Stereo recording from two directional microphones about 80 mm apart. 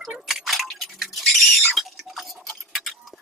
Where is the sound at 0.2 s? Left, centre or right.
Centre.